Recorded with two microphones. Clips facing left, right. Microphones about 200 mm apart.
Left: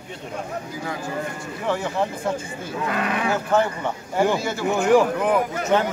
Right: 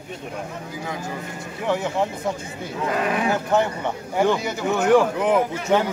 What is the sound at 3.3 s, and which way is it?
Speech, 15° right (ahead or behind).